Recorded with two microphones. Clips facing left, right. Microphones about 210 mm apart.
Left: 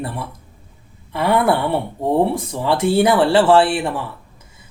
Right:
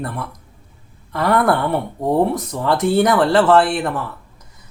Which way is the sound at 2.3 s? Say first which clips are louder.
Even; 25° left (ahead or behind).